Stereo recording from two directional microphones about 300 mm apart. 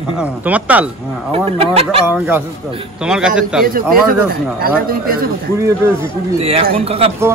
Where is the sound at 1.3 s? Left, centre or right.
Centre.